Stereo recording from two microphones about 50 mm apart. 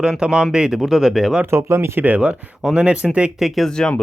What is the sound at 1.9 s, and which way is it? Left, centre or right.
Speech, right.